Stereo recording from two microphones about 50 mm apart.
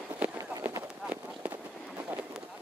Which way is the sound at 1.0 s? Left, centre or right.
Right.